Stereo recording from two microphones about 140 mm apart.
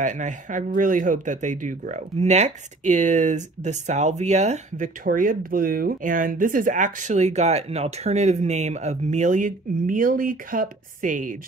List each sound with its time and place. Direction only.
0.0 s speech: 60° right (ahead or behind)